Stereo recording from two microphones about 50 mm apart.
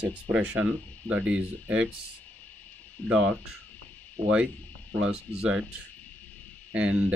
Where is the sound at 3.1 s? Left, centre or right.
Centre.